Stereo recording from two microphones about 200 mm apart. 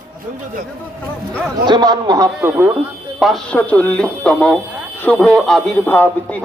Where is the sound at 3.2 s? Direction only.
Centre (ahead or behind).